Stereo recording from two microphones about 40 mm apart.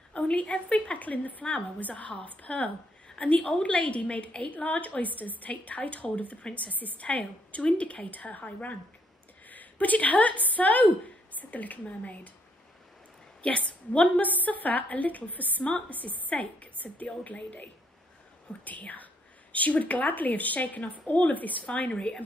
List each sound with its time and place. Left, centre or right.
0.1 s a woman's voice: left
13.4 s a woman's voice: left